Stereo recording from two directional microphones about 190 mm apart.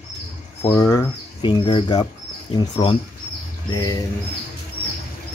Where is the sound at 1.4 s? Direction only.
25° left (ahead or behind).